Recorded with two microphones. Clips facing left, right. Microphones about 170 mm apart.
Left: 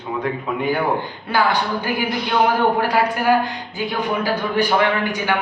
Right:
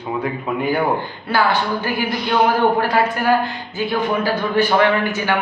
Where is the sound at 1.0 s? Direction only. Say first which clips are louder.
Right 1 dB; 15° left (ahead or behind).